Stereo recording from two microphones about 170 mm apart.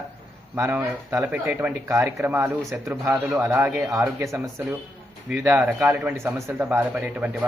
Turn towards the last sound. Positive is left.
turn(degrees=-5)  # may be behind; listen again after turning